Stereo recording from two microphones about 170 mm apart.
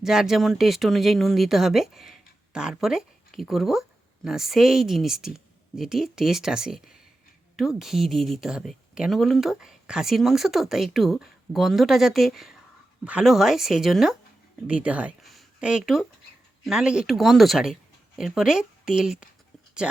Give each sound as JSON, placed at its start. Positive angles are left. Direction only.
{"t": 0.0, "sound": "speech", "side_deg": 0}